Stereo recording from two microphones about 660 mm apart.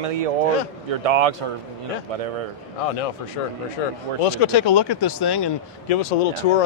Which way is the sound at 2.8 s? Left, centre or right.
Left.